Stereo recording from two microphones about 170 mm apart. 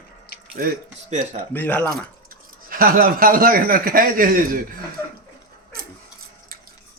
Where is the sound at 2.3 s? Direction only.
60° right (ahead or behind).